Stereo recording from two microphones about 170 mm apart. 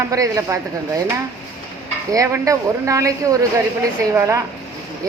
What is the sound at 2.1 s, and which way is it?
Speech, 20° right (ahead or behind).